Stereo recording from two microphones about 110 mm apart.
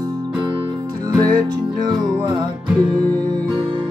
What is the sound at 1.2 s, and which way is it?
Music, 40° right (ahead or behind).